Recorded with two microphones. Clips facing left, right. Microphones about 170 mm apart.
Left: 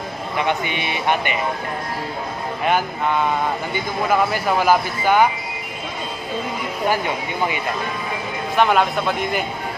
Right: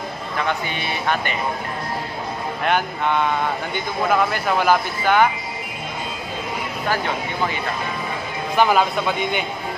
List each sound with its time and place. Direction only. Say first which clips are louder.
0.4 s speech: left 2 dB; 20° left (ahead or behind)
2.6 s speech: left 1 dB; 5° left (ahead or behind)
8.5 s a man's voice: even; centre (ahead or behind)